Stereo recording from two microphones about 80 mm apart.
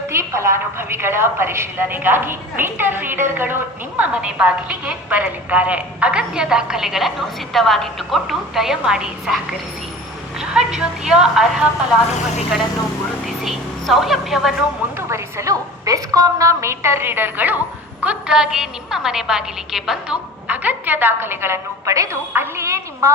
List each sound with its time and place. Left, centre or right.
0.1 s a woman's voice: right; by 11.7 s centre
13.2 s speech: centre
14.9 s a woman's voice: right; by 20.1 s centre
20.5 s a woman's voice: right
21.9 s a woman's voice: right